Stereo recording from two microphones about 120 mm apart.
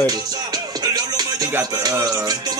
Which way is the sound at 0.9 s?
30° right (ahead or behind).